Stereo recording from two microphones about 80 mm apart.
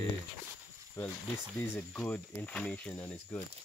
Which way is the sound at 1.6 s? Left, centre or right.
Left.